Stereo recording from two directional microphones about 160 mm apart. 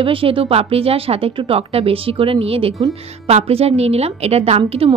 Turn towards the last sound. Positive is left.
turn(degrees=-40)  # may be behind; listen again after turning